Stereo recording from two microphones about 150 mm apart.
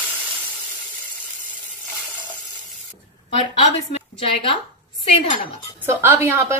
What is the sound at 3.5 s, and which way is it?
Speech, 40° left (ahead or behind).